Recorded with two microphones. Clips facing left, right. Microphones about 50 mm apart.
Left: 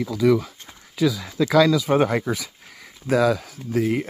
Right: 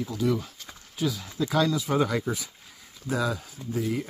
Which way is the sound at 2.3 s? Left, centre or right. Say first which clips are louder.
Left 5 dB; left.